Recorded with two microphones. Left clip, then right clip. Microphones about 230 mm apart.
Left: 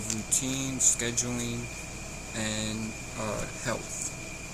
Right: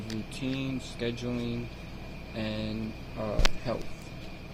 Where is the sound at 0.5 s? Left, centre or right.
Centre.